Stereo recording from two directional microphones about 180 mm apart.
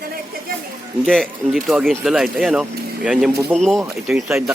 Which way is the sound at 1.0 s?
Centre (ahead or behind).